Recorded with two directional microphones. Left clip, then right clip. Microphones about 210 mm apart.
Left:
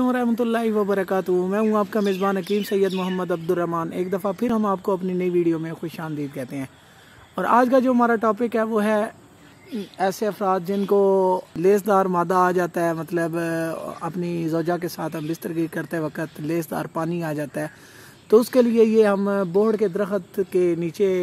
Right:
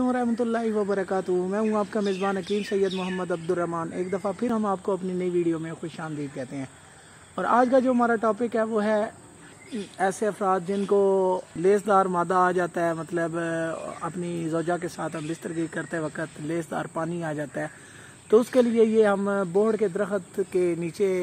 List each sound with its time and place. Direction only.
0.0 s speech: 45° left (ahead or behind)